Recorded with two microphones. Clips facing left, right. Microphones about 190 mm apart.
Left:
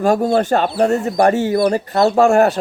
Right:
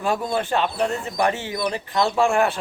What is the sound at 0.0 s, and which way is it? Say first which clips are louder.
Speech: left 9 dB; 45° left (ahead or behind).